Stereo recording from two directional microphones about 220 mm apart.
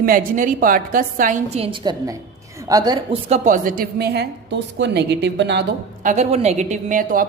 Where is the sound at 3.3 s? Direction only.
35° right (ahead or behind).